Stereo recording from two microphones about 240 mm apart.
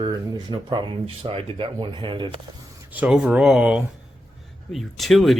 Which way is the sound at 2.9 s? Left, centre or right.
Centre.